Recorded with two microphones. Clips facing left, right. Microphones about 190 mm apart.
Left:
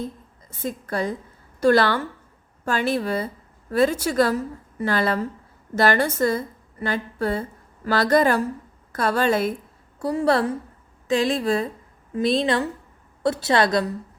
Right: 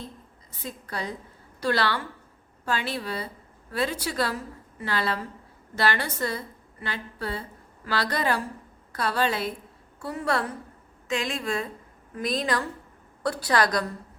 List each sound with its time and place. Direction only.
0.6 s a woman's voice: 50° left (ahead or behind)
10.0 s a woman's voice: 35° left (ahead or behind)